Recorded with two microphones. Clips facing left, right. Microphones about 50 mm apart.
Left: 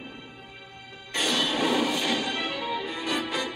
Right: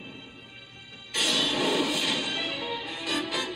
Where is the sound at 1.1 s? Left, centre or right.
Left.